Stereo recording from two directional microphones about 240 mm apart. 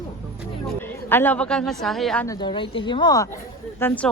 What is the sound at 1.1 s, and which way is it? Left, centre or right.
A woman's voice, centre.